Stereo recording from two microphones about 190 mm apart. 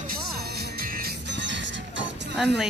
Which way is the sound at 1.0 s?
70° right (ahead or behind).